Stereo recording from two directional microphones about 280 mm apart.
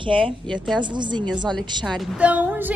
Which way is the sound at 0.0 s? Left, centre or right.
Centre.